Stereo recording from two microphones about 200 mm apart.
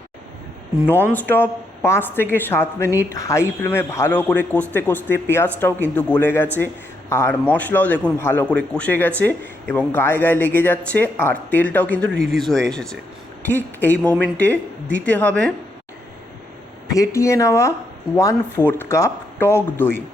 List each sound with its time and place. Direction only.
1.1 s speech: 10° left (ahead or behind)
16.9 s speech: 15° left (ahead or behind)